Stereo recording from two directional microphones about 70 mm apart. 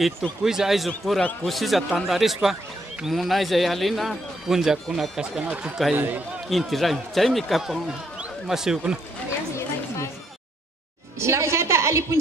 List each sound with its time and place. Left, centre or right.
0.4 s a man's voice: centre
5.4 s speech: centre
5.9 s speech: right
6.5 s a man's voice: centre
11.1 s a woman's voice: right